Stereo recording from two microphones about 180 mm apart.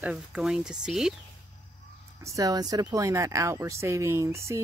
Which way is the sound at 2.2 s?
20° right (ahead or behind).